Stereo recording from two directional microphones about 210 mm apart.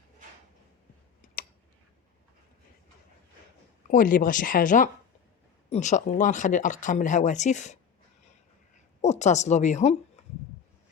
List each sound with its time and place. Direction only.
3.8 s speech: 40° left (ahead or behind)
9.0 s speech: 35° left (ahead or behind)
10.2 s a sound: 35° left (ahead or behind)